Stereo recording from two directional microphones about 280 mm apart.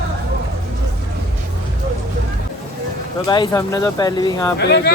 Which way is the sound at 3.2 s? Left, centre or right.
Centre.